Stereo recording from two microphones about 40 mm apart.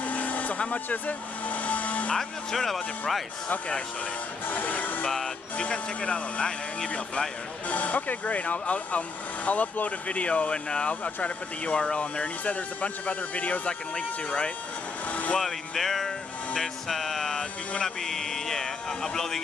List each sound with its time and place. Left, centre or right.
0.0 s vehicle: left
2.1 s speech: centre
3.4 s speech: left
4.5 s speech: left
5.6 s speech: left
7.7 s speech: left
15.4 s music: centre
17.4 s speech: centre